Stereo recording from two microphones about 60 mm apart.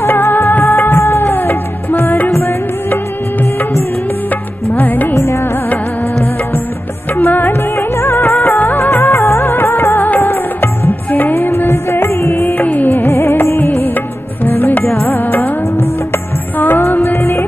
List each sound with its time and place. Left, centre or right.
0.0 s music of bollywood: left
4.7 s music: left
5.1 s music: left
7.2 s music of bollywood: left
9.1 s music: left